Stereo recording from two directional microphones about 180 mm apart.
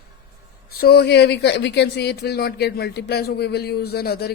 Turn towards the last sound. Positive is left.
turn(degrees=60)  # may be behind; listen again after turning